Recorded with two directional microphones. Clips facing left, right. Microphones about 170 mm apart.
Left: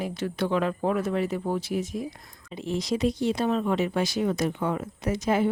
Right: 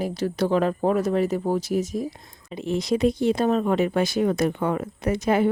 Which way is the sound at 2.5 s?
60° right (ahead or behind).